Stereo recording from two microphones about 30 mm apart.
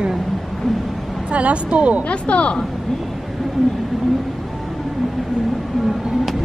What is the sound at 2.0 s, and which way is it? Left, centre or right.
Speech, left.